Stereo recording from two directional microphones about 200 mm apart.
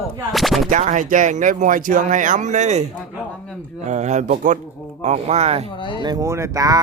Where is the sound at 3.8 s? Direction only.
35° right (ahead or behind).